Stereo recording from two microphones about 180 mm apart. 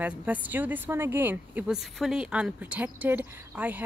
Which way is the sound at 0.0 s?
10° right (ahead or behind).